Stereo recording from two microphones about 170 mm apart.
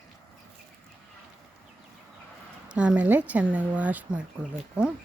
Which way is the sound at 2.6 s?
5° right (ahead or behind).